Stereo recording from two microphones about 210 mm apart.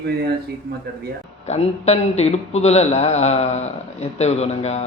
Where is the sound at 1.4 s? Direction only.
30° left (ahead or behind).